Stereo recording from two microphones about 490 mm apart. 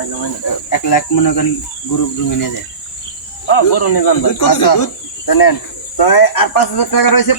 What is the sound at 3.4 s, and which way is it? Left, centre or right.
Speech, left.